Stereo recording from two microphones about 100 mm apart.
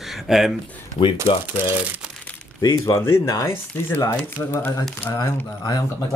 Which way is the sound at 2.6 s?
35° left (ahead or behind).